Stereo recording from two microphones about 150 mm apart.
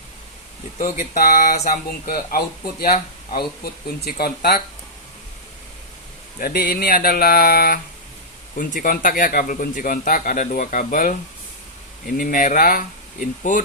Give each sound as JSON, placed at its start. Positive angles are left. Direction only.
{"t": 0.8, "sound": "speech", "side_deg": 75}
{"t": 3.3, "sound": "speech", "side_deg": 90}
{"t": 6.4, "sound": "speech", "side_deg": 75}
{"t": 8.5, "sound": "a man's voice", "side_deg": 60}